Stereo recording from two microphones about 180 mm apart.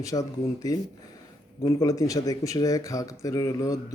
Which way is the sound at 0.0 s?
20° left (ahead or behind).